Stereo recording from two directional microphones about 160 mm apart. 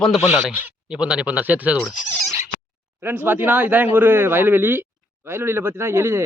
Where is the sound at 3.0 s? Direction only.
15° right (ahead or behind).